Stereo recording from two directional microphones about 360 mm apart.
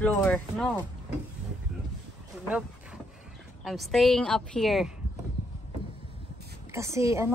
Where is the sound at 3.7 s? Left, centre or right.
Centre.